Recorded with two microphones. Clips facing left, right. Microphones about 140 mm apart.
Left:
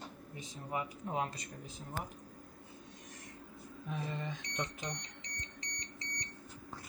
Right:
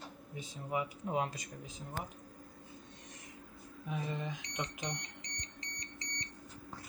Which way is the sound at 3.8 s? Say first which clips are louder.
Right 1 dB; 5° right (ahead or behind).